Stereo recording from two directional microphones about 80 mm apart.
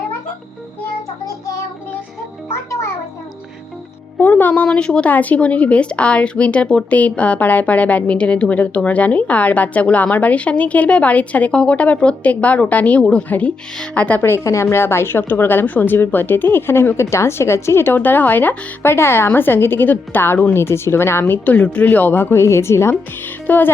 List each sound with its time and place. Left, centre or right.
2.5 s music: left
4.2 s a woman's voice: left
14.2 s a woman's voice: left